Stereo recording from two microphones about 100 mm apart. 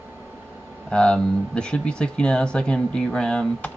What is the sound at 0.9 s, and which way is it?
Speech, 10° left (ahead or behind).